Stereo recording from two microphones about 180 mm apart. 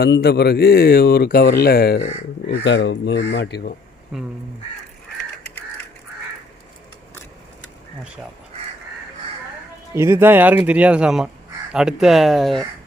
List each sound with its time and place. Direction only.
0.0 s speech: 60° left (ahead or behind)
2.5 s speech: 75° left (ahead or behind)
4.1 s speech: 5° right (ahead or behind)
9.9 s speech: 15° right (ahead or behind)